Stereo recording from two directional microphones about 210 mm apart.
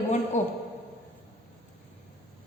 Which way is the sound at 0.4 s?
35° left (ahead or behind).